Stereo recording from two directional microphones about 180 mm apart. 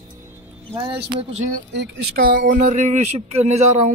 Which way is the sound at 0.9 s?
35° right (ahead or behind).